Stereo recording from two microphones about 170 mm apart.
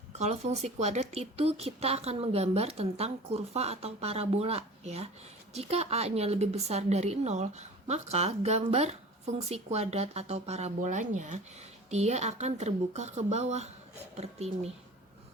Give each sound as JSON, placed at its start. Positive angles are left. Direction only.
{"t": 0.2, "sound": "a woman's voice", "side_deg": -40}